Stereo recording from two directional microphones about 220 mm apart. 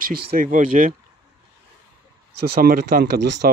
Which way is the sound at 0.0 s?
40° right (ahead or behind).